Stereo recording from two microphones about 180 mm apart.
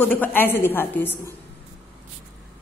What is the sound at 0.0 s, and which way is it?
A woman's voice, 10° left (ahead or behind).